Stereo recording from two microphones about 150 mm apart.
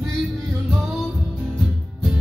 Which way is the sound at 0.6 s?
5° right (ahead or behind).